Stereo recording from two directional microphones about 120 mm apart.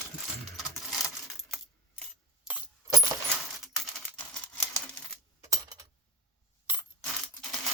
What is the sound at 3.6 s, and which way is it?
Typing, centre (ahead or behind).